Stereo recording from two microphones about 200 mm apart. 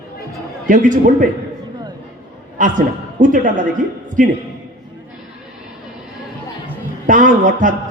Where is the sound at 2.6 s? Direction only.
40° right (ahead or behind).